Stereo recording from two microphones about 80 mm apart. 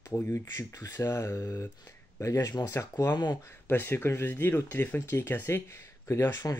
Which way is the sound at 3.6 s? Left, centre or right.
Left.